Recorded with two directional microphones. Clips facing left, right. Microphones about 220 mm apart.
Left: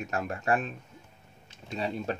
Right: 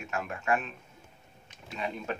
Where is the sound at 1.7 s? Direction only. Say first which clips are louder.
Left 3 dB; 35° left (ahead or behind).